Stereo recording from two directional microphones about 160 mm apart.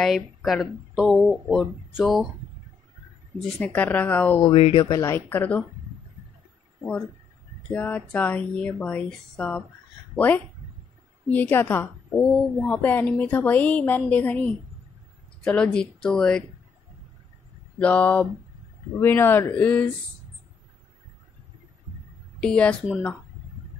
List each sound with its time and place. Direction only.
0.0 s speech: centre (ahead or behind)
3.4 s a woman's voice: 10° left (ahead or behind)
4.4 s speech: 30° left (ahead or behind)
4.9 s a woman's voice: 20° left (ahead or behind)
7.7 s a woman's voice: 10° left (ahead or behind)
17.7 s a woman's voice: 10° left (ahead or behind)
22.4 s a woman's voice: 5° left (ahead or behind)